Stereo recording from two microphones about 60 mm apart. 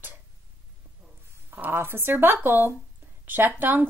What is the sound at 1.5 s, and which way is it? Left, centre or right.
A woman's voice, right.